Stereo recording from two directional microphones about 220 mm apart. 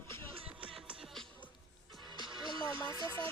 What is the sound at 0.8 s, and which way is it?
Music, 5° right (ahead or behind).